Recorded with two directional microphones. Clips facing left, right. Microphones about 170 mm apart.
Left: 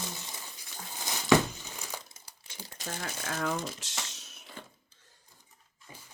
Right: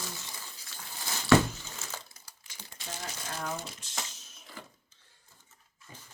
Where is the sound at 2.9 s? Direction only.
60° left (ahead or behind).